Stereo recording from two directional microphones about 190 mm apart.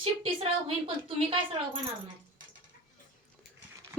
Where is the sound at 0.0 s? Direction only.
30° right (ahead or behind).